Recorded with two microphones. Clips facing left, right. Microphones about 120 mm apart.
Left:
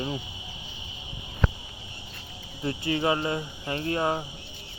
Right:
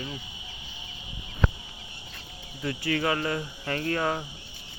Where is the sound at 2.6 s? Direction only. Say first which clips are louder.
Left 1 dB; 25° left (ahead or behind).